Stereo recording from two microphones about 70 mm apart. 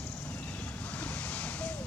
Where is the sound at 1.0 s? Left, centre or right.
Left.